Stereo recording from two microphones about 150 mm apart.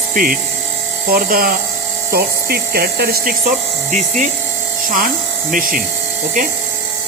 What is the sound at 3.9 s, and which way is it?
Speech, 55° right (ahead or behind).